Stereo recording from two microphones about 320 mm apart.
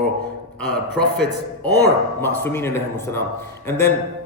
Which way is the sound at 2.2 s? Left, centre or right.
Centre.